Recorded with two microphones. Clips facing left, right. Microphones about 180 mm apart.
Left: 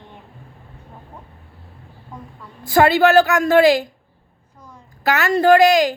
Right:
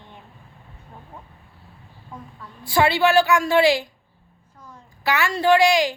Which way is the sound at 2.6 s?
45° left (ahead or behind).